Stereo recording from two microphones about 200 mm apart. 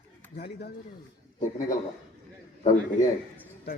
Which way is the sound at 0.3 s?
50° left (ahead or behind).